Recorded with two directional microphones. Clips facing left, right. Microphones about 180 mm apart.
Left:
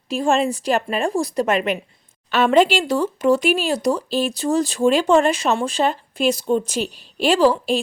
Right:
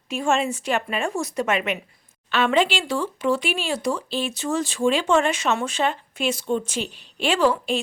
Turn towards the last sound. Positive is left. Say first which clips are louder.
# left 4 dB
turn(degrees=35)  # may be behind; listen again after turning